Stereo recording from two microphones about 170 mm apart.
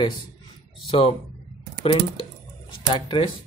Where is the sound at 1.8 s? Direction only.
30° left (ahead or behind).